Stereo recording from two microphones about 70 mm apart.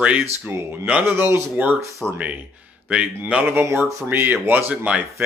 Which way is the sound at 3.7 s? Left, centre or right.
Right.